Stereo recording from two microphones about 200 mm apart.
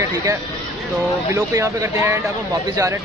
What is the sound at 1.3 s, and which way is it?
Speech, 15° right (ahead or behind).